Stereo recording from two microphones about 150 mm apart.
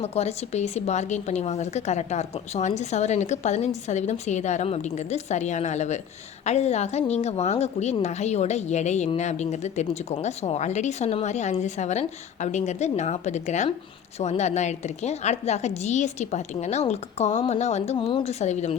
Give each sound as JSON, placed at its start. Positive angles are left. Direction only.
{"t": 0.0, "sound": "speech", "side_deg": 45}
{"t": 17.9, "sound": "speech", "side_deg": 35}